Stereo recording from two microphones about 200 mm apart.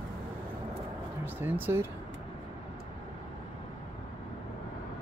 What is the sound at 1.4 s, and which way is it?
Speech, 10° right (ahead or behind).